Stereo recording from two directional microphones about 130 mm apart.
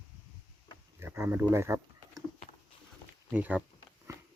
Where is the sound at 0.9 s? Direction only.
20° right (ahead or behind).